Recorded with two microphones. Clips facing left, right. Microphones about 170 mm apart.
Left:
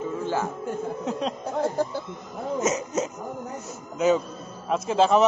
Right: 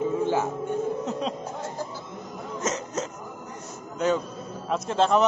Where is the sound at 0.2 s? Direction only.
15° right (ahead or behind).